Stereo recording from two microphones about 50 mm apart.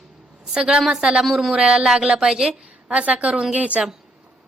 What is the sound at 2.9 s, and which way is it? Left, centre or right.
Speech, right.